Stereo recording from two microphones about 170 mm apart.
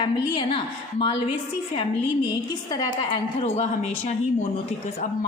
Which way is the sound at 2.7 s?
25° left (ahead or behind).